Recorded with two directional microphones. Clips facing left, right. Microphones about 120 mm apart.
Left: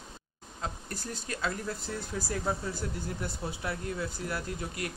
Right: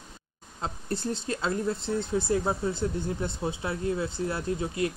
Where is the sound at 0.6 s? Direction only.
25° right (ahead or behind).